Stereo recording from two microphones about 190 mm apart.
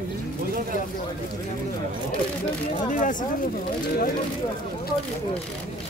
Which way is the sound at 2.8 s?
45° left (ahead or behind).